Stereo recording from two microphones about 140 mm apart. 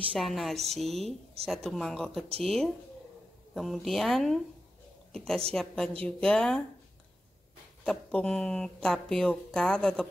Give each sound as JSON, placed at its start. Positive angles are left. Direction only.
{"t": 0.1, "sound": "a woman's voice", "side_deg": 0}
{"t": 7.8, "sound": "speech", "side_deg": 5}